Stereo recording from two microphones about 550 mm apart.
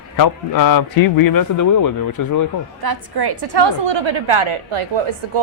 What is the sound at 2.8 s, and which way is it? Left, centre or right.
A woman's voice, right.